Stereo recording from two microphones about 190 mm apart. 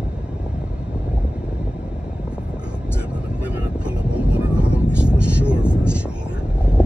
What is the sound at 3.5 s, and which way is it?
Vehicle, 5° right (ahead or behind).